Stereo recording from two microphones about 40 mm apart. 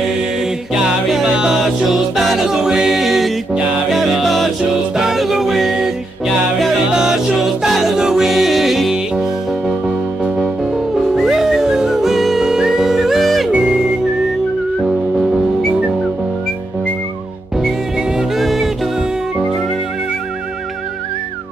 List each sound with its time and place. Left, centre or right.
1.2 s music: centre
1.9 s music: centre
2.4 s music: centre
6.9 s music: centre
7.3 s music: centre
9.1 s music: centre
11.0 s music: centre
13.5 s music: right
18.3 s music: centre